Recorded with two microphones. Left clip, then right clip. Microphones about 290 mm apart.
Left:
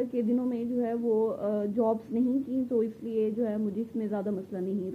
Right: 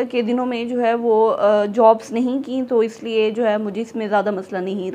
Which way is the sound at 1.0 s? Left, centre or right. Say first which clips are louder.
Right 11 dB; right.